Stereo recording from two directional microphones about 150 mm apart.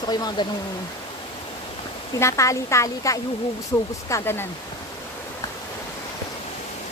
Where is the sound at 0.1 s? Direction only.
25° left (ahead or behind).